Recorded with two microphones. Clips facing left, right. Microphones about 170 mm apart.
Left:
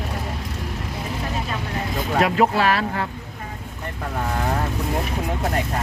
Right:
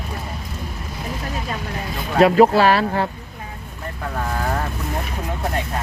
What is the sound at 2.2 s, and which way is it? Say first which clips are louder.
Speech: right 7 dB; 30° right (ahead or behind).